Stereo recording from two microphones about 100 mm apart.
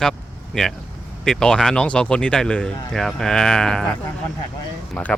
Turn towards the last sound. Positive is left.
turn(degrees=15)  # may be behind; listen again after turning